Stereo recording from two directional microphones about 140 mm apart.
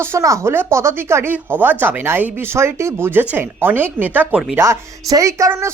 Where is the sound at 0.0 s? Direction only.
20° right (ahead or behind).